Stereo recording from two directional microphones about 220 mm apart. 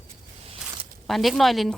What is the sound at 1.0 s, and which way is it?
Speech, centre (ahead or behind).